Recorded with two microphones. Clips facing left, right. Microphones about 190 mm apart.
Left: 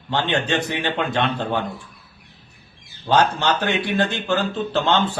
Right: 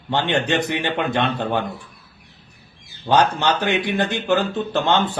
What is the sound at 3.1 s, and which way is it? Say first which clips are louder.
A man's voice: right 1 dB; 15° right (ahead or behind).